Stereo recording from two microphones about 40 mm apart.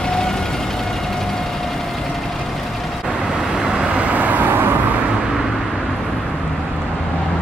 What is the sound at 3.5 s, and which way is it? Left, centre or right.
Vehicle, centre.